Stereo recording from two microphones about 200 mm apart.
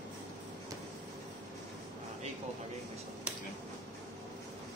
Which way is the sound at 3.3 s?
5° right (ahead or behind).